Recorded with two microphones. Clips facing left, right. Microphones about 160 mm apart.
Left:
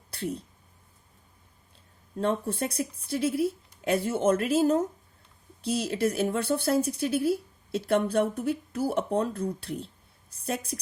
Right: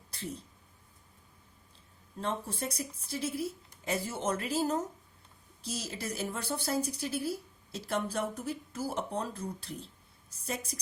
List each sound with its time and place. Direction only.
2.1 s speech: 60° left (ahead or behind)